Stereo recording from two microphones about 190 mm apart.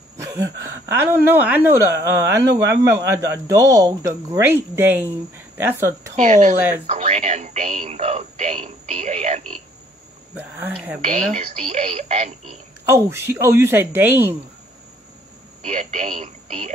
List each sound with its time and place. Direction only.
0.2 s speech: 15° right (ahead or behind)
6.1 s speech: 40° right (ahead or behind)
10.3 s speech: 10° right (ahead or behind)
11.1 s speech: 35° right (ahead or behind)
12.8 s speech: 15° right (ahead or behind)
15.6 s speech: 35° right (ahead or behind)